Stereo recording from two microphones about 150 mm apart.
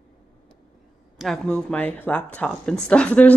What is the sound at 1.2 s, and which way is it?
Speech, 5° left (ahead or behind).